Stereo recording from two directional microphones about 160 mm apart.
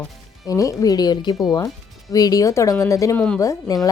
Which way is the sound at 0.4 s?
20° left (ahead or behind).